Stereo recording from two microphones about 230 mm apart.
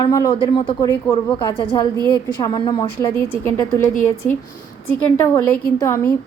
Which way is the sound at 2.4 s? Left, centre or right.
Centre.